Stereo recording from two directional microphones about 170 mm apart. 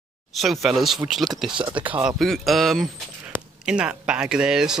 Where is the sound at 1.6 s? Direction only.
30° right (ahead or behind).